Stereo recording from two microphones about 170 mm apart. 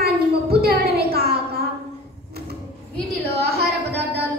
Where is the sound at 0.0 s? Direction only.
65° right (ahead or behind).